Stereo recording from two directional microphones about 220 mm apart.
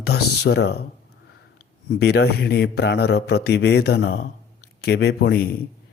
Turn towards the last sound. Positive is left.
turn(degrees=45)  # may be behind; listen again after turning